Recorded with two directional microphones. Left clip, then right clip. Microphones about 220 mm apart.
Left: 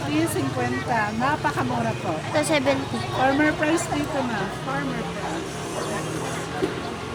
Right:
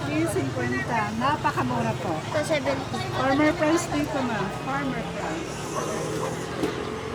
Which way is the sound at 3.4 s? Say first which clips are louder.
Even; 5° right (ahead or behind).